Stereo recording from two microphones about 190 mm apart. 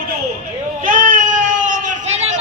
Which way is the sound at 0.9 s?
45° right (ahead or behind).